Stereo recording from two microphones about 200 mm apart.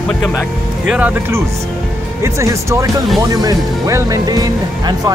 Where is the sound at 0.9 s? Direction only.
10° right (ahead or behind).